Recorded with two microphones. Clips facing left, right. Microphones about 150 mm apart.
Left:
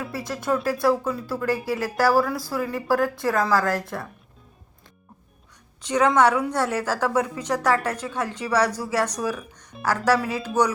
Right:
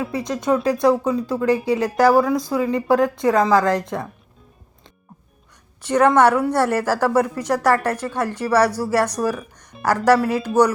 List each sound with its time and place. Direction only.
0.0 s speech: 20° right (ahead or behind)
6.1 s speech: 10° right (ahead or behind)